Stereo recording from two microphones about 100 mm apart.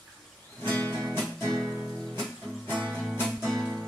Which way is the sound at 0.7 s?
15° left (ahead or behind).